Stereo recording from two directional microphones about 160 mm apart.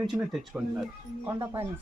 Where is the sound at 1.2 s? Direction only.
25° right (ahead or behind).